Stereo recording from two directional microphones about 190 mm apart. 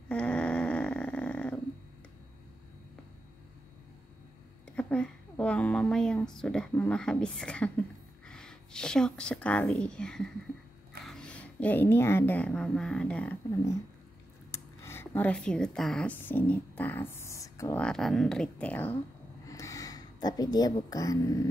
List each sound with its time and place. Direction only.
0.1 s snoring: 5° left (ahead or behind)
4.6 s a woman's voice: 5° left (ahead or behind)
17.8 s a woman's voice: centre (ahead or behind)
19.4 s a sound: 15° left (ahead or behind)